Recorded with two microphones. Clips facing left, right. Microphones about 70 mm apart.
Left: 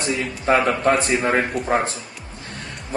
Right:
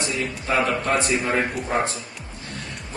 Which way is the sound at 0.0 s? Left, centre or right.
Left.